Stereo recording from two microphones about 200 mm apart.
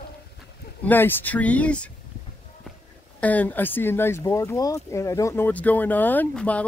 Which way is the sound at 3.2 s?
10° left (ahead or behind).